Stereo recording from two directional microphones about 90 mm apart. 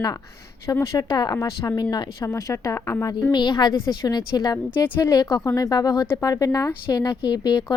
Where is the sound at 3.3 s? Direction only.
55° left (ahead or behind).